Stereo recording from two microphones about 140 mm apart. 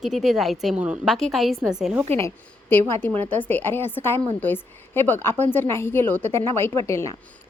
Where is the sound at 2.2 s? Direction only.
15° left (ahead or behind).